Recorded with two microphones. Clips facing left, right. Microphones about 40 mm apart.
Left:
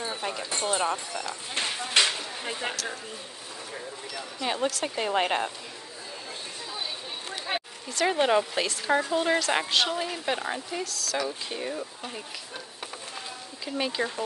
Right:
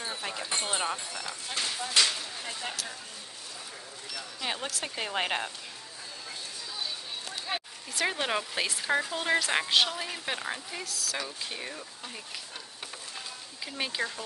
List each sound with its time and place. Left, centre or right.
0.0 s a sound: centre
0.6 s speech: centre
0.8 s speech: centre
1.5 s speech: left
4.5 s speech: centre
7.2 s a sound: left
8.1 s speech: centre
13.7 s speech: centre